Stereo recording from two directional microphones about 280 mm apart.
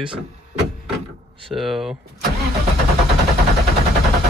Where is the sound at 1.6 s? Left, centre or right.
Centre.